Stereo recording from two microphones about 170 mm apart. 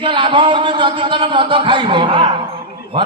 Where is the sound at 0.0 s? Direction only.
30° right (ahead or behind).